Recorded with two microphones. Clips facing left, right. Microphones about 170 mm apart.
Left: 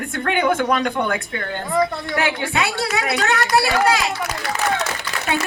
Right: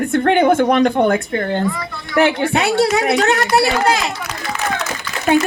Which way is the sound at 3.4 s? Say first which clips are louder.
Right 2 dB; 25° right (ahead or behind).